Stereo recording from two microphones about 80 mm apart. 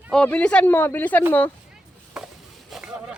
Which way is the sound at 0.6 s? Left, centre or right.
Left.